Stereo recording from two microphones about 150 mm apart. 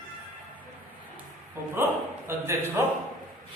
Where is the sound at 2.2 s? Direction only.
15° right (ahead or behind).